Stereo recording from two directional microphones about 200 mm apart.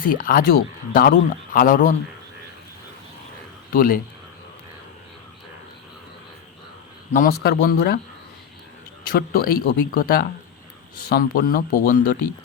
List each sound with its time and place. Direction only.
0.1 s a man's voice: 45° left (ahead or behind)
3.7 s a man's voice: 45° left (ahead or behind)
7.1 s speech: 45° left (ahead or behind)
9.0 s speech: 50° left (ahead or behind)